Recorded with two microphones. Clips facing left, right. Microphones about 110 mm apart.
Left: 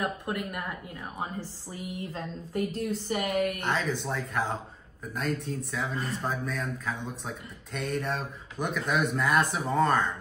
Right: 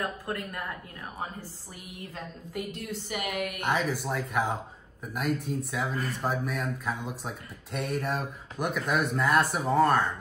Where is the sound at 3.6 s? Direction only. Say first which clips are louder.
Right 1 dB; 10° right (ahead or behind).